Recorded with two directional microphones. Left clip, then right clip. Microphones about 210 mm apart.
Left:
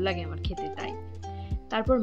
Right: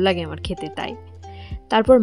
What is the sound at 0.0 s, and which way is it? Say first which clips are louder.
Speech: right 10 dB; 55° right (ahead or behind).